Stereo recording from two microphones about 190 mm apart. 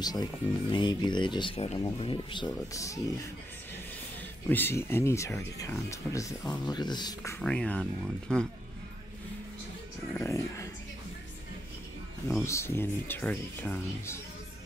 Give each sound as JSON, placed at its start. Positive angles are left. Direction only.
{"t": 0.0, "sound": "speech", "side_deg": 20}
{"t": 2.7, "sound": "speech", "side_deg": 15}
{"t": 4.5, "sound": "speech", "side_deg": 10}
{"t": 7.3, "sound": "speech", "side_deg": 5}
{"t": 10.1, "sound": "speech", "side_deg": 15}
{"t": 12.4, "sound": "speech", "side_deg": 15}